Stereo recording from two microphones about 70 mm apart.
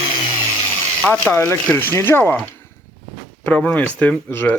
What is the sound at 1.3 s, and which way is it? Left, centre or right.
Speech, left.